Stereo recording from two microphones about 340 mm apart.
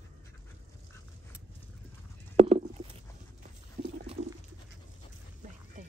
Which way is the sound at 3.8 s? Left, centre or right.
Right.